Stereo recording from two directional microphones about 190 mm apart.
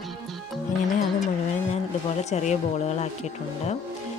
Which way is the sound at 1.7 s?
35° left (ahead or behind).